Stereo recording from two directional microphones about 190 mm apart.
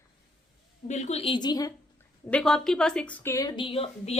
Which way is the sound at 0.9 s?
35° left (ahead or behind).